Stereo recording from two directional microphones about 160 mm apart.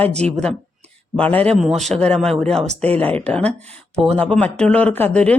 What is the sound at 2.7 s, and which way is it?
Speech, 40° right (ahead or behind).